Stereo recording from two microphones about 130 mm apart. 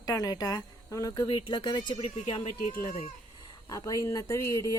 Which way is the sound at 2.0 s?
50° left (ahead or behind).